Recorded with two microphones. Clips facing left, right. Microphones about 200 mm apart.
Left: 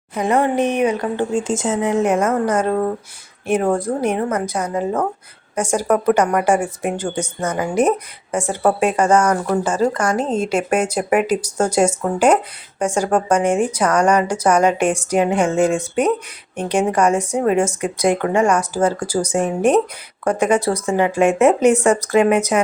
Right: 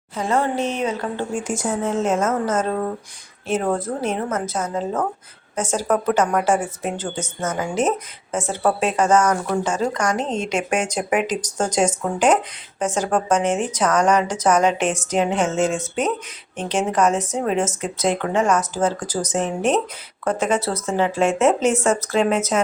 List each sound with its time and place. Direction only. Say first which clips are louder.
0.1 s speech: left 4 dB; 15° left (ahead or behind)
15.5 s speech: left 4 dB; 60° left (ahead or behind)
16.6 s speech: left 3 dB; 10° left (ahead or behind)
21.2 s speech: left 5 dB; 60° left (ahead or behind)
22.0 s speech: left 5 dB; 15° left (ahead or behind)